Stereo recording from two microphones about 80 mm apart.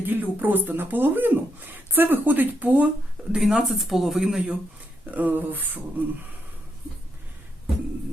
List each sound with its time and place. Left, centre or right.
0.0 s speech: right; by 4.5 s centre
5.1 s speech: right